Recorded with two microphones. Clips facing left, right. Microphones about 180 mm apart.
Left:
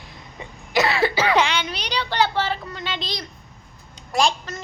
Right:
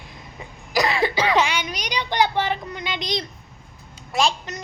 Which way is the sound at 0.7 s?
5° left (ahead or behind).